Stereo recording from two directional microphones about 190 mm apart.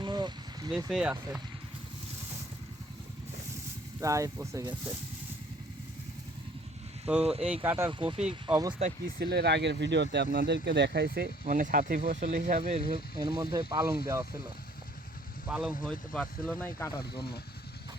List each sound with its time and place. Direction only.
0.0 s a sound: 25° right (ahead or behind)
0.9 s speech: 5° right (ahead or behind)
4.0 s speech: 15° right (ahead or behind)
7.4 s speech: 10° right (ahead or behind)
7.9 s speech: 25° right (ahead or behind)
9.1 s speech: 60° right (ahead or behind)
11.4 s speech: 45° right (ahead or behind)
12.4 s speech: 35° right (ahead or behind)
12.9 s speech: 25° right (ahead or behind)
15.4 s speech: 5° right (ahead or behind)